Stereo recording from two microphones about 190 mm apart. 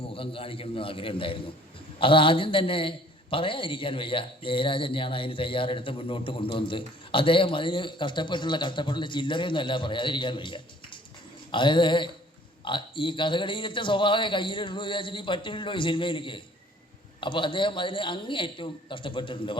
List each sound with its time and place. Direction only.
0.1 s a man's voice: 30° left (ahead or behind)